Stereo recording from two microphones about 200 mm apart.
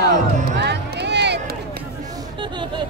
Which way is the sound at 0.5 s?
60° right (ahead or behind).